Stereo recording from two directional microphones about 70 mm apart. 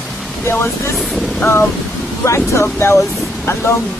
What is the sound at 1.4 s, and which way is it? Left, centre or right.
Speech, left.